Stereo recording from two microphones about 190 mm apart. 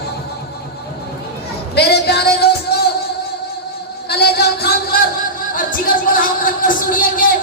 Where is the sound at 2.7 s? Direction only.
55° left (ahead or behind).